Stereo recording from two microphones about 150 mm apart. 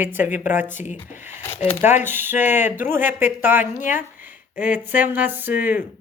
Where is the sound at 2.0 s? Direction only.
15° right (ahead or behind).